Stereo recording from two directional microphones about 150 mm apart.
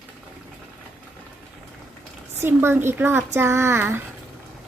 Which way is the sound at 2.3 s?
15° right (ahead or behind).